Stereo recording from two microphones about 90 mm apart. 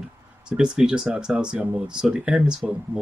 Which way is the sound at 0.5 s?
10° right (ahead or behind).